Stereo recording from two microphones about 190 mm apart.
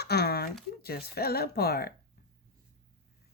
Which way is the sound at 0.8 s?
55° left (ahead or behind).